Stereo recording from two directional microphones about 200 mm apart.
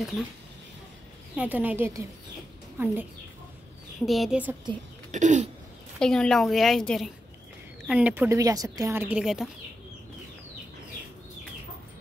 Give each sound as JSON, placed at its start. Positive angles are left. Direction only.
{"t": 1.3, "sound": "a woman's voice", "side_deg": -10}
{"t": 5.1, "sound": "a sound", "side_deg": -35}
{"t": 5.9, "sound": "a woman's voice", "side_deg": 5}